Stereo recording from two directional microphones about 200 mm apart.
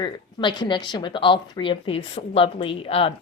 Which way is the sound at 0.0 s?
25° left (ahead or behind).